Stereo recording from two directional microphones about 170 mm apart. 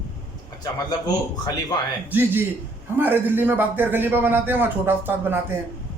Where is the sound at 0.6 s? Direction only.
20° left (ahead or behind).